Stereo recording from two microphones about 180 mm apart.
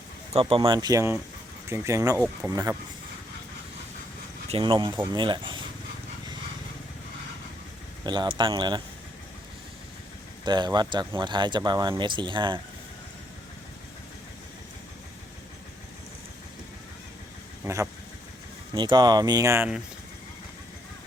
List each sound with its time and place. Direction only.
0.3 s speech: 30° right (ahead or behind)
4.4 s speech: 30° right (ahead or behind)
8.0 s speech: 25° right (ahead or behind)
10.4 s speech: 25° right (ahead or behind)
18.7 s speech: 25° right (ahead or behind)